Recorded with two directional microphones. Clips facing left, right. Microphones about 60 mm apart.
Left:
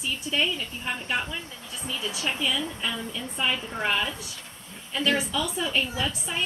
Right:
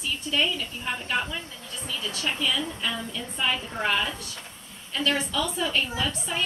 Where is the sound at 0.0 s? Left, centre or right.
Centre.